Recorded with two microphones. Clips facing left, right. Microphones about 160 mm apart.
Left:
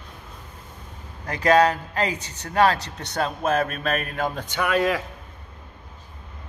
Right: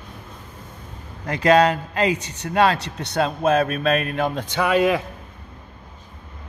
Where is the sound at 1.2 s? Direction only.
25° right (ahead or behind).